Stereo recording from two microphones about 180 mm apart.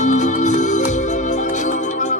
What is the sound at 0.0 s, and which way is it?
Music, 40° left (ahead or behind).